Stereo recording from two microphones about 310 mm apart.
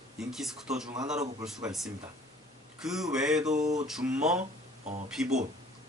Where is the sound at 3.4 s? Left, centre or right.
Right.